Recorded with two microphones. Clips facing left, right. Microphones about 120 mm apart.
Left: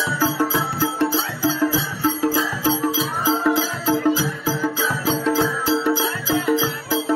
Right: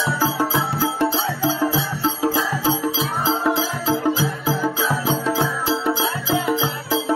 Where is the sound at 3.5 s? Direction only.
25° right (ahead or behind).